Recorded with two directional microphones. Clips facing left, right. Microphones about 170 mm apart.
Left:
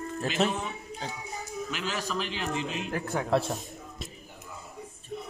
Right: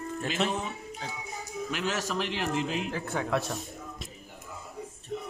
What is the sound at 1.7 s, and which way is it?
Speech, 70° right (ahead or behind).